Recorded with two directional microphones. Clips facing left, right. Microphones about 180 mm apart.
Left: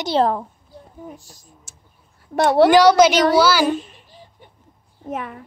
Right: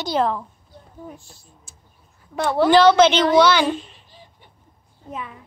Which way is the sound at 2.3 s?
75° left (ahead or behind).